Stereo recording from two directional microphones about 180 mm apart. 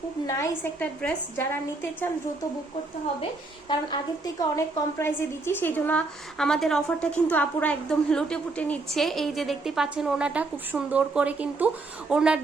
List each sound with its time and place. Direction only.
0.3 s a woman's voice: 10° left (ahead or behind)
3.7 s a woman's voice: 25° left (ahead or behind)
4.5 s a woman's voice: 15° left (ahead or behind); by 12.4 s 5° right (ahead or behind)